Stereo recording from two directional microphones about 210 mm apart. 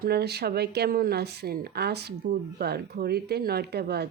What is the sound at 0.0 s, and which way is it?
A woman's voice, 50° right (ahead or behind).